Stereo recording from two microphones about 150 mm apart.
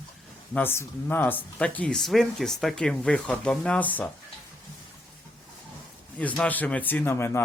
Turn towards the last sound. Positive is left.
turn(degrees=15)  # may be behind; listen again after turning